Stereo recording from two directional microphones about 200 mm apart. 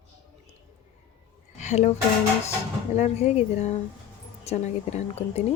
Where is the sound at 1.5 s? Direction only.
35° left (ahead or behind).